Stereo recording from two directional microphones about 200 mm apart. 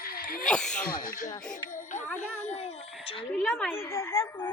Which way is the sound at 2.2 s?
35° left (ahead or behind).